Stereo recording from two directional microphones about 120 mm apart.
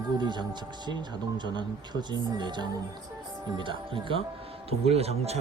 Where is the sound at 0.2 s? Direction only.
40° right (ahead or behind).